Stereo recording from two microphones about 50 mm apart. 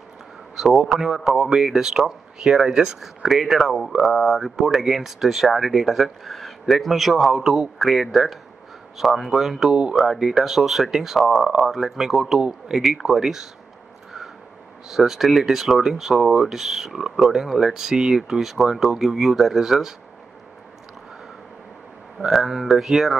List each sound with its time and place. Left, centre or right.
0.6 s speech: centre
9.7 s speech: centre
9.9 s speech: centre
14.9 s speech: centre
22.3 s speech: centre